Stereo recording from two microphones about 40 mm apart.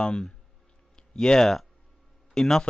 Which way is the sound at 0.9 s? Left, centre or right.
Centre.